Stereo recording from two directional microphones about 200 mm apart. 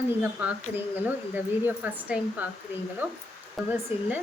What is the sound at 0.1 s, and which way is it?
A woman's voice, 5° right (ahead or behind).